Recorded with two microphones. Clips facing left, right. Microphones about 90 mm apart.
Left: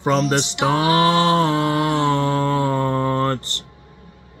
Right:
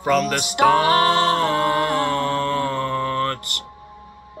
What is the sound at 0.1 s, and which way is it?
Speech, 50° right (ahead or behind).